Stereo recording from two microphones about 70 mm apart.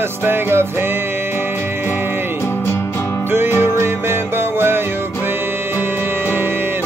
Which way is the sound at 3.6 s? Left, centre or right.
Right.